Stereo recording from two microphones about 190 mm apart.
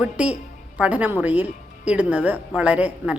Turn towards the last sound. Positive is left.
turn(degrees=-5)  # may be behind; listen again after turning